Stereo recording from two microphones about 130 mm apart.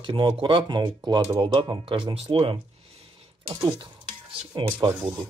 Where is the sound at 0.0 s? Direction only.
40° right (ahead or behind).